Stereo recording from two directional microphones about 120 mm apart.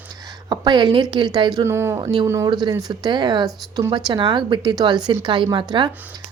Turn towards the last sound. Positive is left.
turn(degrees=-40)  # may be behind; listen again after turning